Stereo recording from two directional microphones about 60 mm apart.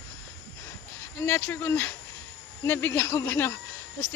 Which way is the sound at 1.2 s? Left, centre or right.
Left.